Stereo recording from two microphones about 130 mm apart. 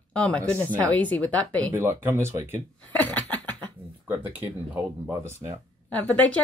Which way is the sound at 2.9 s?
10° left (ahead or behind).